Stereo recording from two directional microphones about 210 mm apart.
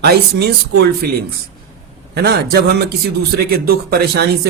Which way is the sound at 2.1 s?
50° right (ahead or behind).